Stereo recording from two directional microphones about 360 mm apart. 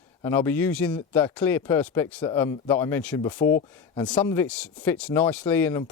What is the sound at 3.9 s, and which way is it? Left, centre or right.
Speech, centre.